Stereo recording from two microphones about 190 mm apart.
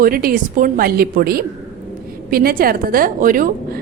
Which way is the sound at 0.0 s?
50° right (ahead or behind).